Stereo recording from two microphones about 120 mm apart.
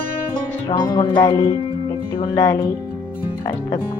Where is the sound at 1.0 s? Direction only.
45° left (ahead or behind).